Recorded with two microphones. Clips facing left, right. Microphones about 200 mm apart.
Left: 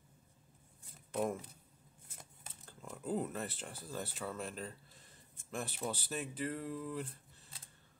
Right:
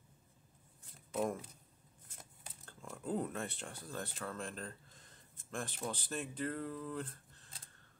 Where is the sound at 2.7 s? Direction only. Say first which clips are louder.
Left 1 dB; 5° left (ahead or behind).